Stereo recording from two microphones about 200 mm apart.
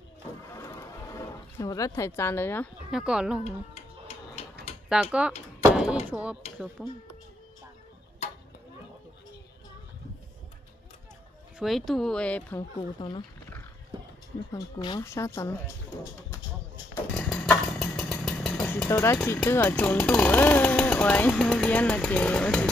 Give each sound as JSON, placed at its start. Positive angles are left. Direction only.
{"t": 0.5, "sound": "a sound", "side_deg": 15}
{"t": 2.9, "sound": "speech", "side_deg": -5}
{"t": 3.4, "sound": "a sound", "side_deg": 30}
{"t": 5.0, "sound": "speech", "side_deg": -5}
{"t": 11.5, "sound": "speech", "side_deg": 0}
{"t": 12.7, "sound": "speech", "side_deg": 25}
{"t": 13.9, "sound": "a sound", "side_deg": -25}
{"t": 14.5, "sound": "speech", "side_deg": 20}
{"t": 16.9, "sound": "chainsaw", "side_deg": 5}